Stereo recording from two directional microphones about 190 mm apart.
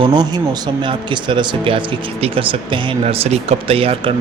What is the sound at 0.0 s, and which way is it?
Speech, 25° right (ahead or behind).